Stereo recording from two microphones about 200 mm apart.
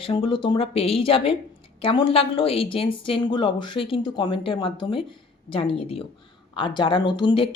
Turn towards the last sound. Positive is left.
turn(degrees=25)  # may be behind; listen again after turning